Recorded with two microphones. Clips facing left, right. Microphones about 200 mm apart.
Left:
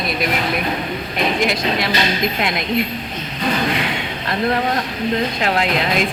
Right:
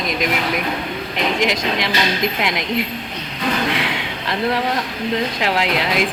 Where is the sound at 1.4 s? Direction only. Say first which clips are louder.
Left 1 dB; 15° right (ahead or behind).